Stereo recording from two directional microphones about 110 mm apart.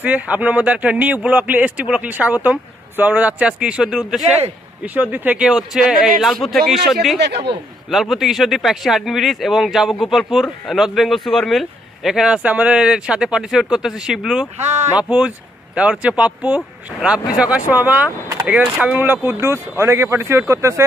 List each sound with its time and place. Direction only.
0.0 s speech: 15° right (ahead or behind)
14.6 s speech: 90° right
15.0 s speech: 10° right (ahead or behind)